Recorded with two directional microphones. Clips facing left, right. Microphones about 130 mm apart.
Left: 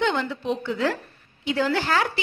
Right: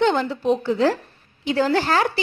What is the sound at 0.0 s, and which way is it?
A woman's voice, 40° right (ahead or behind).